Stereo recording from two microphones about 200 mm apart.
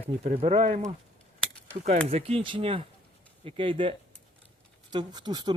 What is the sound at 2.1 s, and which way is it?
Speech, 30° right (ahead or behind).